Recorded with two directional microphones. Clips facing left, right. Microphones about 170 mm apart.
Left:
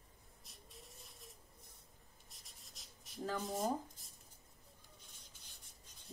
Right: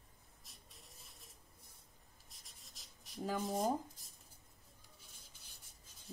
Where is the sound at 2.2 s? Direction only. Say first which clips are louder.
Even; centre (ahead or behind).